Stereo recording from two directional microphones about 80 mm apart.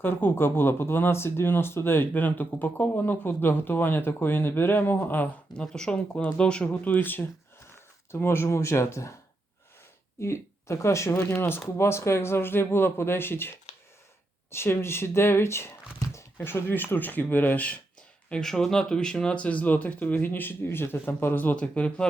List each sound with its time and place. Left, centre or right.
0.0 s speech: left
5.5 s speech: centre; by 9.1 s left
10.2 s speech: left
14.5 s speech: left
18.3 s speech: centre